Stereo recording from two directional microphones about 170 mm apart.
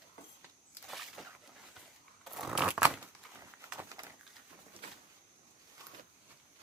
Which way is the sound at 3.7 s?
20° right (ahead or behind).